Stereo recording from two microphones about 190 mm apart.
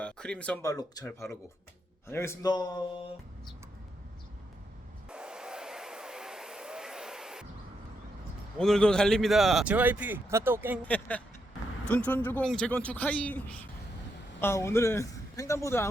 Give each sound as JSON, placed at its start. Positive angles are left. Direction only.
{"t": 0.0, "sound": "speech", "side_deg": 5}
{"t": 0.6, "sound": "speech", "side_deg": 20}
{"t": 5.0, "sound": "a sound", "side_deg": -5}
{"t": 8.5, "sound": "a man's voice", "side_deg": 5}
{"t": 10.8, "sound": "speech", "side_deg": 10}